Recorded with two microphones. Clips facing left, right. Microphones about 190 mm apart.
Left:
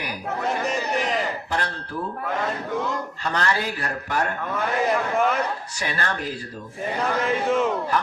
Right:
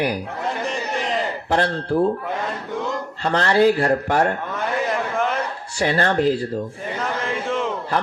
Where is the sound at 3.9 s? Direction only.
45° right (ahead or behind).